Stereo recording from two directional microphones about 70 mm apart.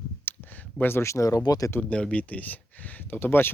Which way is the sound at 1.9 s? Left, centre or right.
Centre.